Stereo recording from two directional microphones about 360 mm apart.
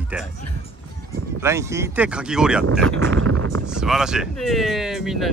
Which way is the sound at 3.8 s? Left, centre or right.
Centre.